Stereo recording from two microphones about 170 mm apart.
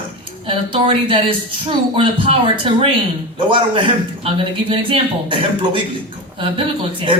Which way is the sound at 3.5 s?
30° right (ahead or behind).